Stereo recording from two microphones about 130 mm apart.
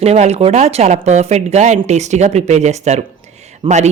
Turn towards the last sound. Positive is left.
turn(degrees=-40)  # may be behind; listen again after turning